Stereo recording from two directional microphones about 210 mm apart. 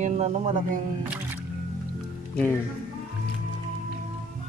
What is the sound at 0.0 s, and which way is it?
Speech, 35° right (ahead or behind).